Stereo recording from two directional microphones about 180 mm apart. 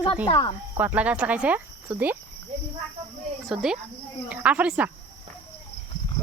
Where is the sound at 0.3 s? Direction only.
25° left (ahead or behind).